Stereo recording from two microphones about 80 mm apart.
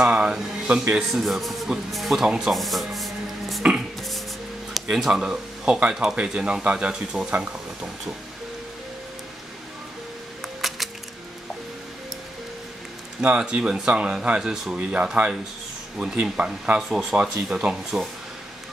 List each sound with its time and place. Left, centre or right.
0.0 s a sound: centre
0.8 s speech: centre
1.2 s speech: centre
4.7 s speech: centre
7.2 s speech: centre
10.6 s music: centre
13.2 s speech: centre